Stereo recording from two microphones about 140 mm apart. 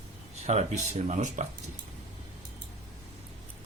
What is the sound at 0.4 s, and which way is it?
Speech, 55° right (ahead or behind).